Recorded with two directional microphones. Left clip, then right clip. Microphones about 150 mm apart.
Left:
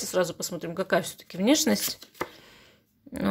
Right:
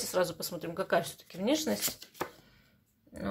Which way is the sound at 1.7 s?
Centre (ahead or behind).